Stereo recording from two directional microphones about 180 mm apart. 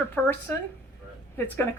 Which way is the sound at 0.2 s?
5° left (ahead or behind).